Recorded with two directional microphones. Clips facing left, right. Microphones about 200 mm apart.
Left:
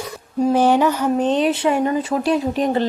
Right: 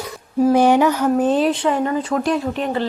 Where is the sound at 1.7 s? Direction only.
20° left (ahead or behind).